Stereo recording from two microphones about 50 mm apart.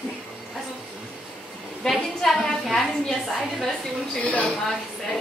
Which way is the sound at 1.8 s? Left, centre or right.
Centre.